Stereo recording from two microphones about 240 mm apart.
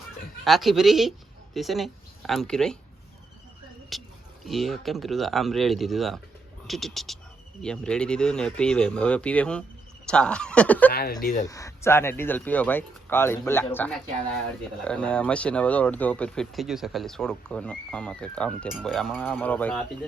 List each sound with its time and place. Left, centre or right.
0.4 s speech: centre
3.9 s a sound: centre
4.4 s speech: centre
10.9 s speech: left
11.4 s speech: centre
14.8 s speech: centre